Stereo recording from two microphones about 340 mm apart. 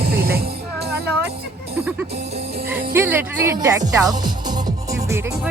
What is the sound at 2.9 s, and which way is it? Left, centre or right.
Speech, centre.